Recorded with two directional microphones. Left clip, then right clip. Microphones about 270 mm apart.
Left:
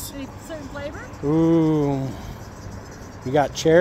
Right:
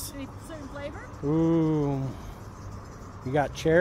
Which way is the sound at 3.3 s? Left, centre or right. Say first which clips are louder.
Left 7 dB; centre.